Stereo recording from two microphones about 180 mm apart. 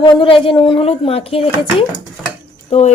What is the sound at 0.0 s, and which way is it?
Speech, 30° left (ahead or behind).